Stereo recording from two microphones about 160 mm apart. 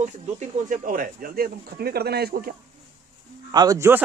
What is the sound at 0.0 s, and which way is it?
Speech, 50° right (ahead or behind).